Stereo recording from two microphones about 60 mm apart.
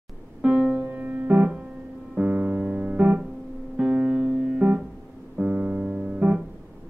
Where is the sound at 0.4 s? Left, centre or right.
Centre.